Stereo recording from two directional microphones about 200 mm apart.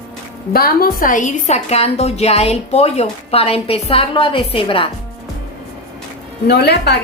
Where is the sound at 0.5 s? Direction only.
50° left (ahead or behind); by 4.9 s 25° left (ahead or behind).